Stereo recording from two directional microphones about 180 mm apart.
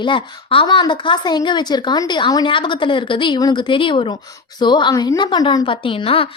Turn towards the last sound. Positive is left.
turn(degrees=30)  # may be behind; listen again after turning